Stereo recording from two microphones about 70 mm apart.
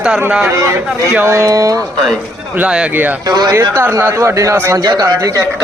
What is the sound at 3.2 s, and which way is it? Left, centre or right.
Speech, right.